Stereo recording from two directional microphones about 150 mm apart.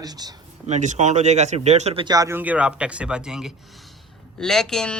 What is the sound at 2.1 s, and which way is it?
A man's voice, 20° right (ahead or behind).